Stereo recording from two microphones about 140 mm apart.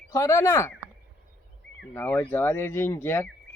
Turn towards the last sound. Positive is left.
turn(degrees=15)  # may be behind; listen again after turning